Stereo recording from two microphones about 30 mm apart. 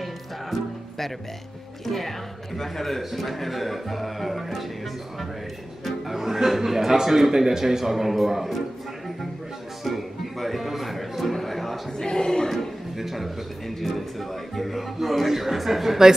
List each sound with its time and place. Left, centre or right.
0.0 s music: centre
1.9 s speech: centre
3.0 s speech: centre
5.9 s speech: centre
9.8 s music: centre
12.0 s a sound: left
12.9 s speech: centre